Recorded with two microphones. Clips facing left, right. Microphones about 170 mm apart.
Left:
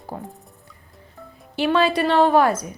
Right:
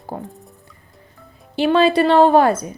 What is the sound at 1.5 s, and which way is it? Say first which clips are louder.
Speech: right 4 dB; 25° right (ahead or behind).